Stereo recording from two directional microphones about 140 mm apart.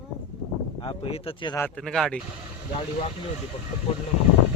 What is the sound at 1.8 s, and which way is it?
Speech, 5° left (ahead or behind).